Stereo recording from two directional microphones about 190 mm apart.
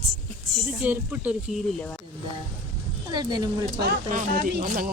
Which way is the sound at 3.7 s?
60° right (ahead or behind).